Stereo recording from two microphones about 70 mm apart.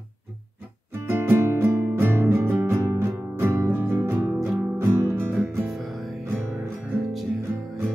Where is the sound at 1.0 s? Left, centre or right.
Right.